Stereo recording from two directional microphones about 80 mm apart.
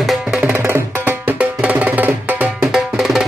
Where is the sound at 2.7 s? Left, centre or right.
Centre.